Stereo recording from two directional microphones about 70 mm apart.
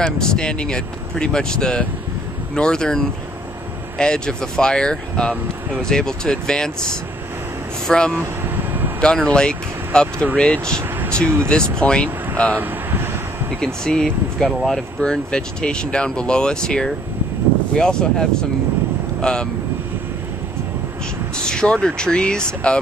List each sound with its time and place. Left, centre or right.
0.0 s speech: centre
7.8 s speech: centre
8.2 s vehicle: right
9.0 s speech: centre
11.8 s speech: centre
12.5 s vehicle: right
13.8 s speech: centre
21.4 s speech: centre